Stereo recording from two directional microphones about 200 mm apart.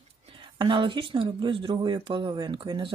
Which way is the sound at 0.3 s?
25° right (ahead or behind).